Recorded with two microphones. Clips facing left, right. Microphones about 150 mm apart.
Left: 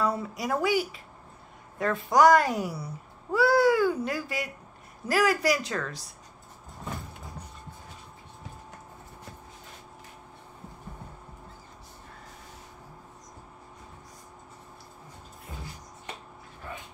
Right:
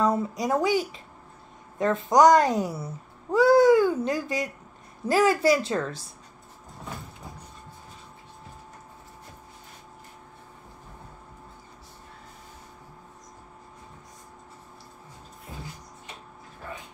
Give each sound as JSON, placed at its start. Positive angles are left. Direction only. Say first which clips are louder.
{"t": 0.0, "sound": "a child's voice", "louder": "right 4 dB", "side_deg": -20}